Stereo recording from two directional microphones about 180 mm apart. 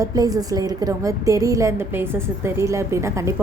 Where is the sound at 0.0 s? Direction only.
20° right (ahead or behind).